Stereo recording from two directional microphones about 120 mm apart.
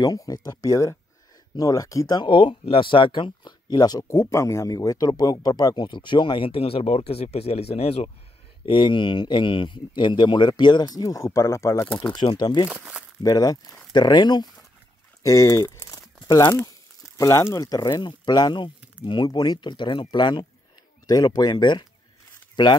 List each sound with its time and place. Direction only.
0.0 s speech: 30° left (ahead or behind); by 8.1 s 60° left (ahead or behind)
8.6 s speech: 40° left (ahead or behind); by 11.9 s 25° left (ahead or behind)
12.1 s speech: 40° left (ahead or behind)
12.6 s speech: 10° right (ahead or behind)
13.2 s speech: 30° left (ahead or behind)
15.2 s speech: 25° left (ahead or behind)
16.3 s speech: 40° left (ahead or behind)
17.2 s speech: 25° left (ahead or behind)